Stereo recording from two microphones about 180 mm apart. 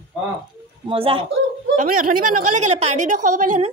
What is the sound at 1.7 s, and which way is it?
A woman's voice, 50° right (ahead or behind).